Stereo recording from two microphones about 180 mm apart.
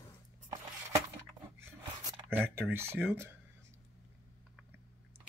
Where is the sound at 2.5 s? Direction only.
10° right (ahead or behind).